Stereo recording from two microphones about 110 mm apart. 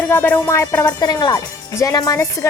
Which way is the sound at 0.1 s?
20° left (ahead or behind).